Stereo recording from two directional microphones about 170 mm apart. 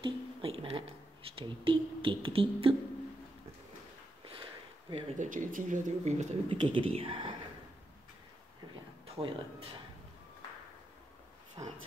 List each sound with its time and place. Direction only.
0.0 s a sound: 30° right (ahead or behind)
1.3 s speech: 30° right (ahead or behind)
4.2 s sniff: 30° right (ahead or behind)
5.1 s speech: 50° right (ahead or behind)
6.6 s speech: 30° right (ahead or behind)
9.0 s speech: 35° right (ahead or behind)
11.6 s speech: 20° right (ahead or behind)